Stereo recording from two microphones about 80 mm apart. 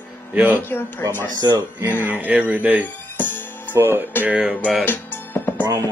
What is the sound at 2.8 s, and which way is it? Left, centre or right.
Music, left.